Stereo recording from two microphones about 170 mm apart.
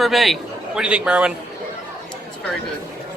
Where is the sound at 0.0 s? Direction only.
Centre (ahead or behind).